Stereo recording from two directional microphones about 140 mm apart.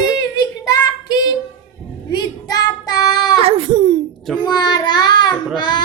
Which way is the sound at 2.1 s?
30° left (ahead or behind).